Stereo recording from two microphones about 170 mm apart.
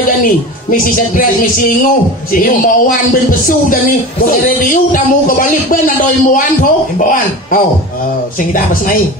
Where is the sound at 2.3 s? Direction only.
55° left (ahead or behind).